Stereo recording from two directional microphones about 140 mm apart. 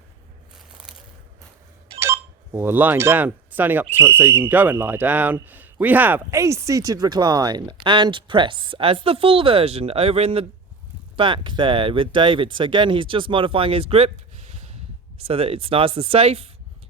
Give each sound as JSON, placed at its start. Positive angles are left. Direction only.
{"t": 2.0, "sound": "speech", "side_deg": -20}